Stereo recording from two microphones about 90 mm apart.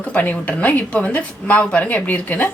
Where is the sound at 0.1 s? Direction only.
15° left (ahead or behind).